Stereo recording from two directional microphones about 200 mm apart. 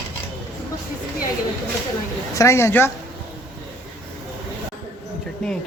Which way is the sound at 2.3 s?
15° left (ahead or behind).